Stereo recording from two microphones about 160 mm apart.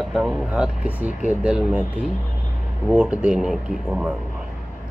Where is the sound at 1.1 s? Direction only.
50° left (ahead or behind).